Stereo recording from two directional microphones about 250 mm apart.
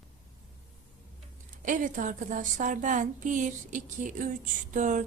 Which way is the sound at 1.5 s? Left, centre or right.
Right.